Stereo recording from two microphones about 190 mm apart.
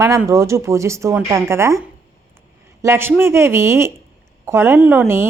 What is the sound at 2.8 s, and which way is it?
Speech, 10° right (ahead or behind).